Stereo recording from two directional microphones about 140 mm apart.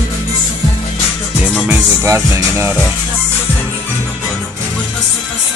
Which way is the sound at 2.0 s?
20° right (ahead or behind).